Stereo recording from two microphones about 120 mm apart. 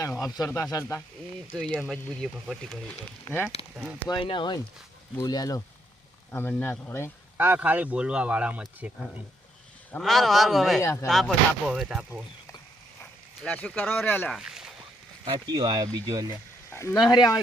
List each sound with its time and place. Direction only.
0.2 s speech: 30° left (ahead or behind)
1.5 s speech: 10° left (ahead or behind)
4.1 s speech: 45° left (ahead or behind)
6.3 s speech: 15° left (ahead or behind)
7.3 s speech: 15° right (ahead or behind)
10.0 s speech: centre (ahead or behind)
10.8 s speech: 20° left (ahead or behind)
11.0 s speech: centre (ahead or behind)
13.4 s speech: 10° left (ahead or behind)
14.3 s speech: 5° right (ahead or behind)
15.4 s speech: 35° right (ahead or behind)
16.6 s a sound: 20° left (ahead or behind)
17.1 s speech: 30° left (ahead or behind)